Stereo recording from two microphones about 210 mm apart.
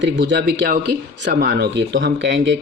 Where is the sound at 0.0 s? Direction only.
60° right (ahead or behind).